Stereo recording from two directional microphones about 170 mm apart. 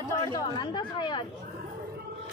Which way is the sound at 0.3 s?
25° left (ahead or behind).